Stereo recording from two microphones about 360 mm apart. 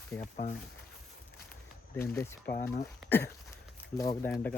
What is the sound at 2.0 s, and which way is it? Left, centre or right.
Speech, centre.